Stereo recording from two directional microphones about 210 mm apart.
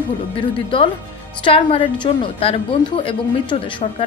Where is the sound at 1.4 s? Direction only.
25° left (ahead or behind).